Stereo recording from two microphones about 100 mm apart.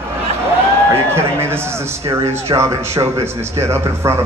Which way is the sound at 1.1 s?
25° right (ahead or behind).